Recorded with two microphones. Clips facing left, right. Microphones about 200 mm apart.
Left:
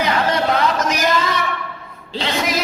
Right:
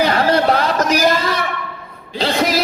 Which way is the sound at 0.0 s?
35° right (ahead or behind).